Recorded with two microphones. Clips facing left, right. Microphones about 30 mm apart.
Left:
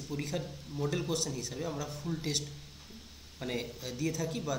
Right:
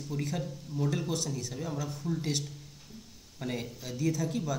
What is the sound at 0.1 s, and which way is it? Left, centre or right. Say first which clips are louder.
Speech: right 2 dB; centre.